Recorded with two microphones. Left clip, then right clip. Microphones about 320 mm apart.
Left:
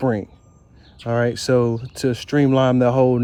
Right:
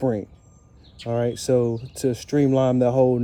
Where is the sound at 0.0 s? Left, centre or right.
Left.